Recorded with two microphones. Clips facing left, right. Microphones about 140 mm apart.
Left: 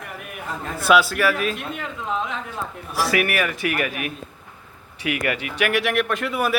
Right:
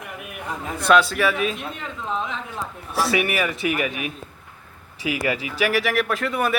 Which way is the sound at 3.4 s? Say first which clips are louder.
Even; centre (ahead or behind).